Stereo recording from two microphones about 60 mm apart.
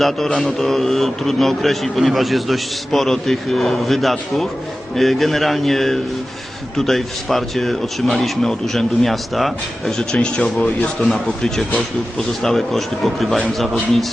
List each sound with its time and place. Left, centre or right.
0.3 s a man's voice: centre
10.0 s a man's voice: centre